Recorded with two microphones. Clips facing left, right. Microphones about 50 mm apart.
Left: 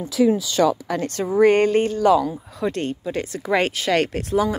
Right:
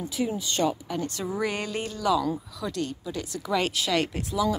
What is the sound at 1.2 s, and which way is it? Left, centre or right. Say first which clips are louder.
Speech: left 15 dB; left.